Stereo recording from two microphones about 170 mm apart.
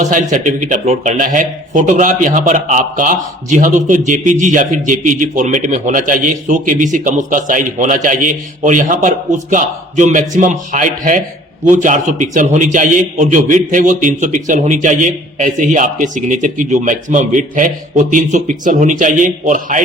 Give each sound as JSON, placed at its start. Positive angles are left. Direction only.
{"t": 0.0, "sound": "speech", "side_deg": -50}